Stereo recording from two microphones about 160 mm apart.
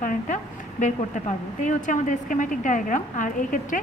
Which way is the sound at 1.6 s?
50° left (ahead or behind).